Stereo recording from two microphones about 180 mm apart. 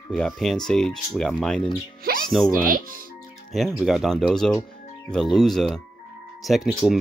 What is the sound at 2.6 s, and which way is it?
Speech, 50° right (ahead or behind).